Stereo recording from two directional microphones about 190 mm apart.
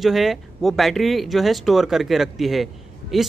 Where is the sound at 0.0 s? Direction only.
Centre (ahead or behind).